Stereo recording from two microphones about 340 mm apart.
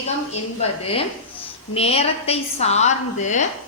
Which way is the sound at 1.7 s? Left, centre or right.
Centre.